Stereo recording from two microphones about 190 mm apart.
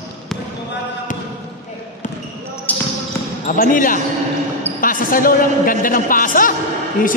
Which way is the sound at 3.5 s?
45° left (ahead or behind).